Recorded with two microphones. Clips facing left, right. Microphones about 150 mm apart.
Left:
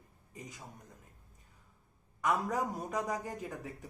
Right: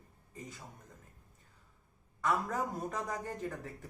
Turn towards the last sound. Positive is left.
turn(degrees=10)  # may be behind; listen again after turning